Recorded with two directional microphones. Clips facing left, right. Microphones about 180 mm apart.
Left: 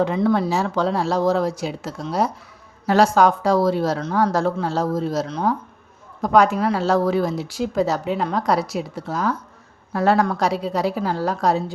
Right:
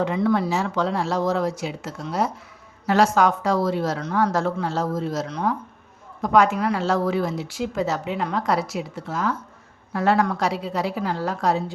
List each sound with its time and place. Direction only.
0.0 s speech: 30° left (ahead or behind)